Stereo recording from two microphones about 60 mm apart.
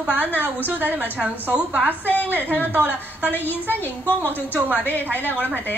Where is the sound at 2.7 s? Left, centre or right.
Right.